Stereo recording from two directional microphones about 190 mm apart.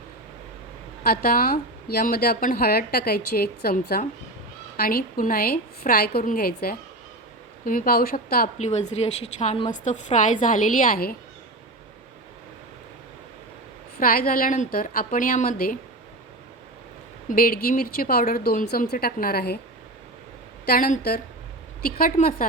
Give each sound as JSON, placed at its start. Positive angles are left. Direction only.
{"t": 1.0, "sound": "speech", "side_deg": 50}
{"t": 8.5, "sound": "a woman's voice", "side_deg": 35}
{"t": 14.0, "sound": "speech", "side_deg": 50}
{"t": 17.2, "sound": "speech", "side_deg": 50}
{"t": 20.7, "sound": "speech", "side_deg": 45}